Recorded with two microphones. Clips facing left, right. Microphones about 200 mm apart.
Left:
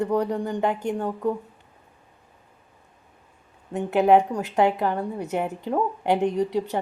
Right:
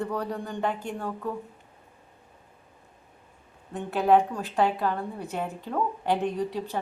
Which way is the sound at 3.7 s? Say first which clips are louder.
Left 4 dB; 20° left (ahead or behind).